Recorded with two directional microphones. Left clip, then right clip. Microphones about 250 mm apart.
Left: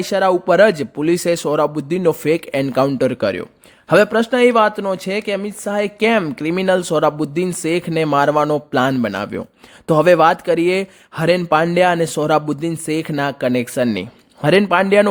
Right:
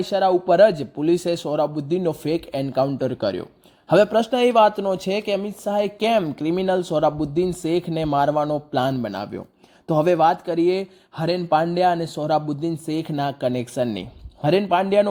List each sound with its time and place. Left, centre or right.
0.0 s speech: left